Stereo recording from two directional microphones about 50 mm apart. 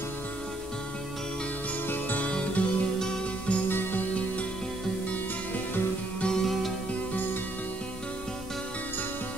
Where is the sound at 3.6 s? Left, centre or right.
Left.